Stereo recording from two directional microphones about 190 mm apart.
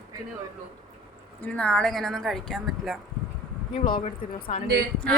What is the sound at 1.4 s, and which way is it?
A woman's voice, 5° left (ahead or behind).